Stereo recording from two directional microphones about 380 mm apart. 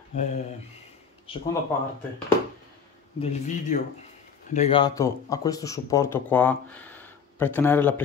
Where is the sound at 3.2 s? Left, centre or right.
Centre.